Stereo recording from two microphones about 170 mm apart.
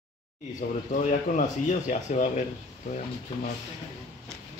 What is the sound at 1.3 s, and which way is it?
Speech, 45° left (ahead or behind).